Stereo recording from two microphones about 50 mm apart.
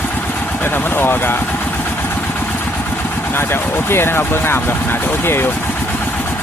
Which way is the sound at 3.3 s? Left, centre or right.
Left.